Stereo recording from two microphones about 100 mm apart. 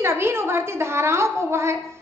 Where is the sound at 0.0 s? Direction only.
25° right (ahead or behind).